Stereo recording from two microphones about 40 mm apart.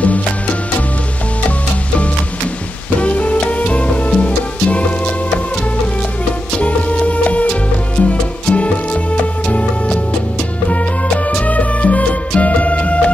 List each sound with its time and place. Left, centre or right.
0.0 s music: left
3.0 s music: left
6.6 s music: left
10.7 s music: left